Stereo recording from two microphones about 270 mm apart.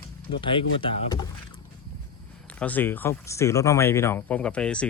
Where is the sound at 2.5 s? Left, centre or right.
Centre.